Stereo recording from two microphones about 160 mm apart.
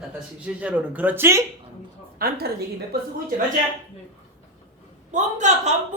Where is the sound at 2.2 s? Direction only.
75° right (ahead or behind).